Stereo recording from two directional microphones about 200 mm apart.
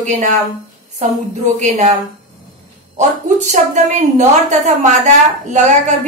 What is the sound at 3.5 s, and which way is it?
A man's voice, 35° right (ahead or behind).